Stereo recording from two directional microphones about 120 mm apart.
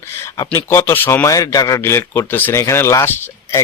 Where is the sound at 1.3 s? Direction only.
30° left (ahead or behind).